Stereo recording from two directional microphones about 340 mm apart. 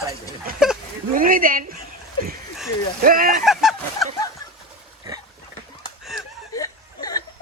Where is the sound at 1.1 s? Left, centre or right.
Right.